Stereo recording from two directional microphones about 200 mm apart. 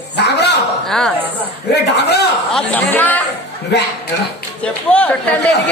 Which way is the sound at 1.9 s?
55° left (ahead or behind).